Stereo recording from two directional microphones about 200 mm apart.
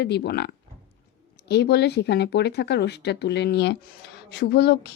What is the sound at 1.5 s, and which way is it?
Speech, 55° left (ahead or behind).